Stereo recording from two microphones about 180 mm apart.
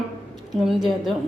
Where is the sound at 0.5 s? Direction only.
Centre (ahead or behind).